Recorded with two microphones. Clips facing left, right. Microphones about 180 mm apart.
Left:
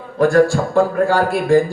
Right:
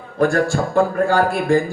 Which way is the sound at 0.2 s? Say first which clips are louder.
Left 4 dB; 45° right (ahead or behind).